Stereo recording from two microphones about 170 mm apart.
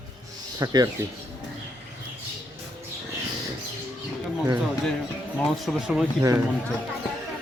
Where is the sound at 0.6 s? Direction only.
25° right (ahead or behind).